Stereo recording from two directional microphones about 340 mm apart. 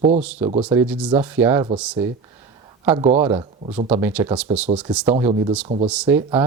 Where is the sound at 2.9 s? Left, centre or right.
Centre.